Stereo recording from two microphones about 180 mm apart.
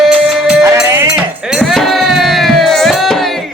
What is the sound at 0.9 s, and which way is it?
Music, 10° right (ahead or behind).